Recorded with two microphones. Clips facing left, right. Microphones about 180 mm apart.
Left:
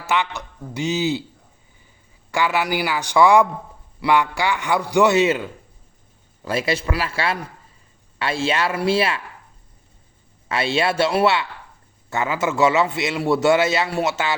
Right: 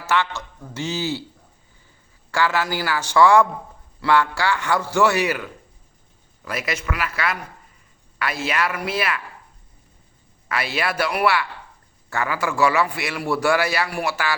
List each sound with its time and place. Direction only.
0.0 s a man's voice: 15° left (ahead or behind)
2.3 s a man's voice: 15° left (ahead or behind)
10.5 s a man's voice: 25° left (ahead or behind)